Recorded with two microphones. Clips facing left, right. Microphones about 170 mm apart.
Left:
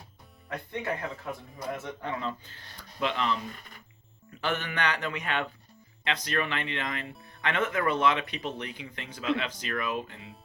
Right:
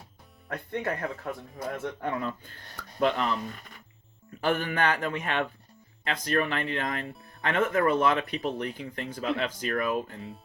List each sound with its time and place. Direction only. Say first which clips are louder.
0.4 s speech: right 2 dB; 50° right (ahead or behind)
4.4 s speech: right 4 dB; 40° right (ahead or behind)